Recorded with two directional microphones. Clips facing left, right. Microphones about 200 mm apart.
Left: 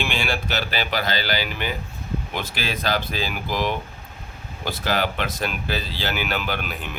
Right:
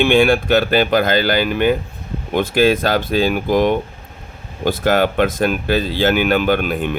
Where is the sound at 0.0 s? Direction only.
55° right (ahead or behind).